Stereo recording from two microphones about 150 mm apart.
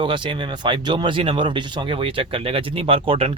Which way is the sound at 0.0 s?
35° right (ahead or behind).